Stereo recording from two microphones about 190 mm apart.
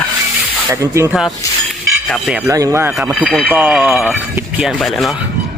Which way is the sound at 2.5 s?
15° right (ahead or behind).